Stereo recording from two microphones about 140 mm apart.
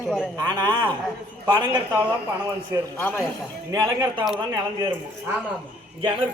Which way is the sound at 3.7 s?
25° right (ahead or behind).